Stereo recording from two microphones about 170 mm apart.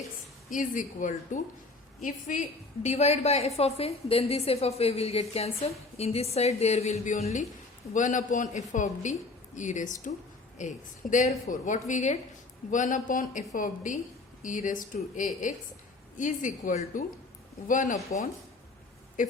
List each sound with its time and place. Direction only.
0.5 s a woman's voice: 50° left (ahead or behind)